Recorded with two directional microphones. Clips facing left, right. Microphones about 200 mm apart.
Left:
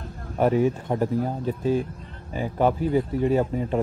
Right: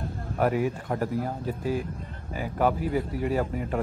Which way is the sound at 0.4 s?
25° left (ahead or behind).